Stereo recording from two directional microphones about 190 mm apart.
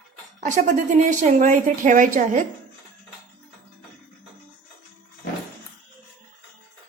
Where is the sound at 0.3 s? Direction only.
40° right (ahead or behind).